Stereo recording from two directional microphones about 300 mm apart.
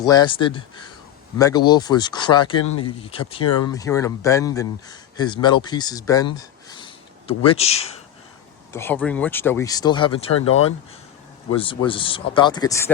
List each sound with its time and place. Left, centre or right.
0.0 s speech: centre
6.3 s a sound: centre
8.7 s speech: centre
11.5 s speech: centre